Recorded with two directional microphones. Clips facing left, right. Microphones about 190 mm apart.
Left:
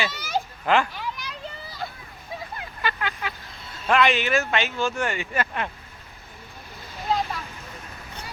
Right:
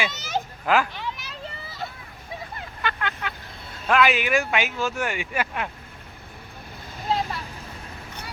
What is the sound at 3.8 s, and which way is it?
Speech, 5° right (ahead or behind).